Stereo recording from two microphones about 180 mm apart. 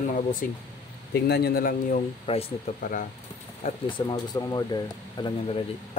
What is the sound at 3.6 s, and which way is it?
Speech, 25° left (ahead or behind).